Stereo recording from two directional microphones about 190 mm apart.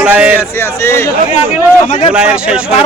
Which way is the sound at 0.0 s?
5° right (ahead or behind).